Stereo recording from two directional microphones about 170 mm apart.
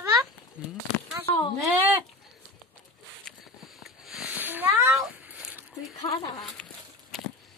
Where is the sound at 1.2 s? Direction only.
30° left (ahead or behind).